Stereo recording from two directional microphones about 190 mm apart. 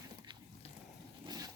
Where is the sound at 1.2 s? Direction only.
20° right (ahead or behind).